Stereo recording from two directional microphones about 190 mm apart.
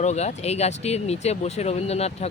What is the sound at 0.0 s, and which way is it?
Speech, 35° left (ahead or behind).